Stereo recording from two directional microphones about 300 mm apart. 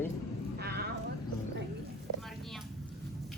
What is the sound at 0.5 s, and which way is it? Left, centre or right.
Vehicle, right.